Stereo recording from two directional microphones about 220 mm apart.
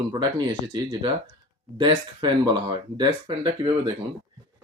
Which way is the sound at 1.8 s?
20° right (ahead or behind).